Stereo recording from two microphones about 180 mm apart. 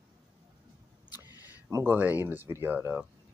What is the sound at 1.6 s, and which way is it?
Speech, 15° right (ahead or behind).